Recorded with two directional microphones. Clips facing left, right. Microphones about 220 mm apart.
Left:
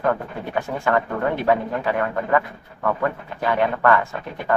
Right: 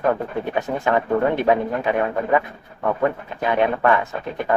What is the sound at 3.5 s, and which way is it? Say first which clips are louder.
Speech: right 1 dB; 20° right (ahead or behind).